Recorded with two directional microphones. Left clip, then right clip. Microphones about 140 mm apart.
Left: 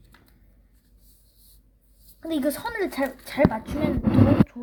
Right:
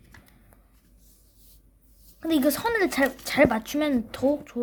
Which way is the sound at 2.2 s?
40° right (ahead or behind).